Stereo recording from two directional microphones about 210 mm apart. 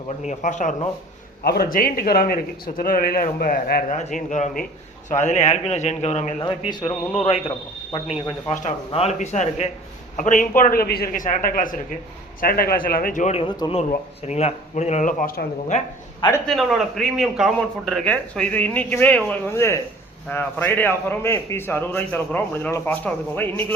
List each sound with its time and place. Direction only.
0.3 s speech: 35° left (ahead or behind)
1.5 s a man's voice: 45° left (ahead or behind)
6.4 s speech: 20° left (ahead or behind); by 15.8 s 40° left (ahead or behind)
16.5 s a man's voice: centre (ahead or behind)